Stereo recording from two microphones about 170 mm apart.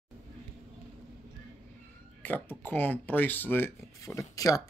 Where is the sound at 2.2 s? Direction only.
10° left (ahead or behind).